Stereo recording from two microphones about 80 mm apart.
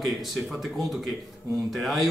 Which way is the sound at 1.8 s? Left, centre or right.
Centre.